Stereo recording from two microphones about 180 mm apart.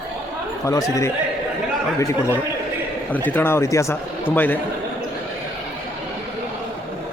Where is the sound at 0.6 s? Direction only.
15° left (ahead or behind).